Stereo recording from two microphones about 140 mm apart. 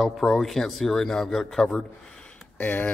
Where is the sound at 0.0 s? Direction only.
Centre (ahead or behind).